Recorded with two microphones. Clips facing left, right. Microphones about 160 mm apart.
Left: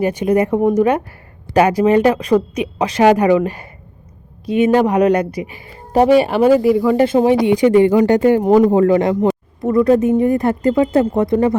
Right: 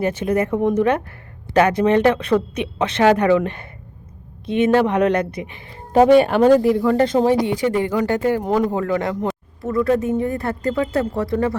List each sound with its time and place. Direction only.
0.0 s speech: 10° left (ahead or behind)